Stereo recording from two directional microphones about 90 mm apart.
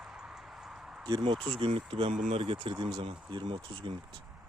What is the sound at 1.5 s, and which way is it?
Speech, 90° right.